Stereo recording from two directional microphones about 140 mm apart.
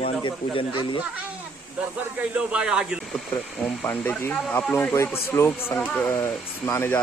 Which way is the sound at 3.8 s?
15° left (ahead or behind).